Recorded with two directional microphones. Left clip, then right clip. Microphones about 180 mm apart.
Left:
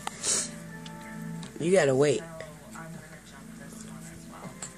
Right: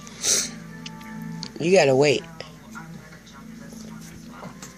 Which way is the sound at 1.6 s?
15° right (ahead or behind).